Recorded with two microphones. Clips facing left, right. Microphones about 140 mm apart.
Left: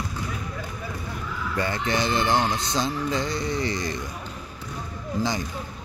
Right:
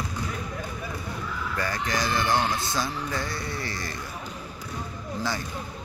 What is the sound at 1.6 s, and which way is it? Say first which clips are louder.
A man's voice: left 4 dB; 25° left (ahead or behind).